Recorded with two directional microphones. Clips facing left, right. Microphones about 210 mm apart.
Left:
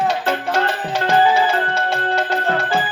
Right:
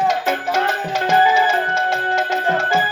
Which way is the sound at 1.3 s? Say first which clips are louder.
Even; 35° left (ahead or behind).